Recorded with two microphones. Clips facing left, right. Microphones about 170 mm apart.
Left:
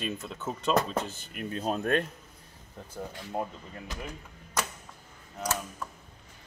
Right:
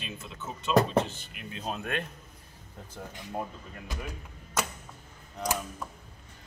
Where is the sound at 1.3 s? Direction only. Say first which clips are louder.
Left 6 dB; 45° left (ahead or behind).